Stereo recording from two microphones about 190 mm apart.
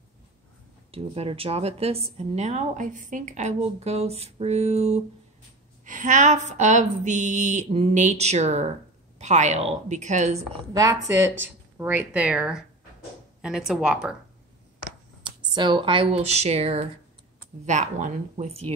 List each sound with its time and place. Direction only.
0.9 s a woman's voice: 30° right (ahead or behind)
10.7 s speech: 20° right (ahead or behind)
15.2 s a woman's voice: 25° right (ahead or behind)